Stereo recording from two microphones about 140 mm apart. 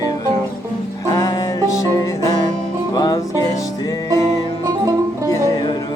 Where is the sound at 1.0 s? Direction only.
25° left (ahead or behind).